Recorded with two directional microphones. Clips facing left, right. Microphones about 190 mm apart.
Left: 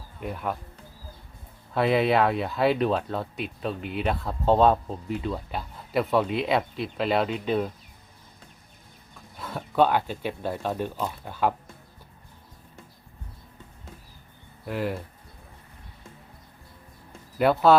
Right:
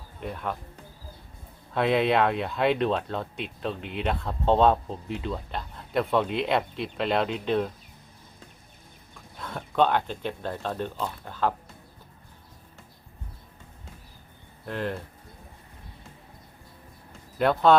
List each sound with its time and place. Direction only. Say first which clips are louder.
0.2 s speech: left 2 dB; 5° left (ahead or behind)
1.7 s speech: left 1 dB; centre (ahead or behind)
9.4 s speech: left 2 dB; 5° left (ahead or behind)
14.7 s speech: left 2 dB; 5° left (ahead or behind)
17.1 s a sound: left 2 dB; 5° left (ahead or behind)